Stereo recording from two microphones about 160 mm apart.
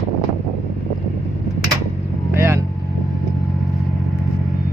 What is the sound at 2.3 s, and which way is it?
Vehicle, 15° right (ahead or behind).